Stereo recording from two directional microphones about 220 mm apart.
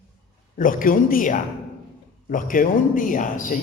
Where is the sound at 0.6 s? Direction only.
40° left (ahead or behind).